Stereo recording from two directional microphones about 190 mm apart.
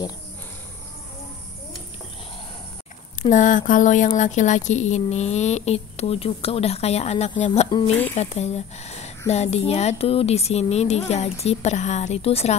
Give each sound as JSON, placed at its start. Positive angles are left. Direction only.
{"t": 3.2, "sound": "speech", "side_deg": 40}
{"t": 7.9, "sound": "speech", "side_deg": 10}
{"t": 8.2, "sound": "speech", "side_deg": 35}